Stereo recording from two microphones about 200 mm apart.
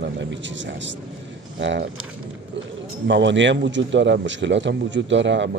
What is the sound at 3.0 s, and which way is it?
Speech, 65° right (ahead or behind).